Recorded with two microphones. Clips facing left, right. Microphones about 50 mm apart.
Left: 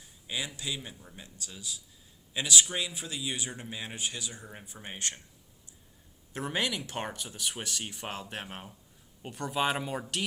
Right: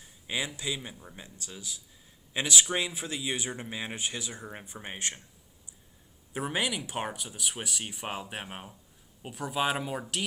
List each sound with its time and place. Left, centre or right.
0.3 s speech: right
6.3 s speech: centre